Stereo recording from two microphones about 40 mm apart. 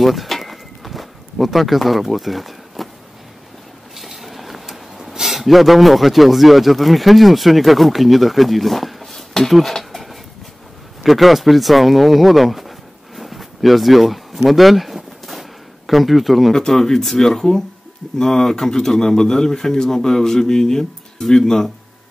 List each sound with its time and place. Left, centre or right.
0.0 s a sound: centre
3.9 s speech: centre
11.0 s speech: centre
16.5 s speech: centre